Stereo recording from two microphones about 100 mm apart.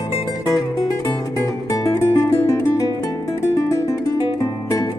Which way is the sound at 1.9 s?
30° left (ahead or behind).